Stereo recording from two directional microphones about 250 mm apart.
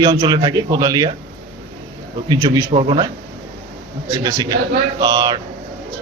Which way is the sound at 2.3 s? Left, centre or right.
Centre.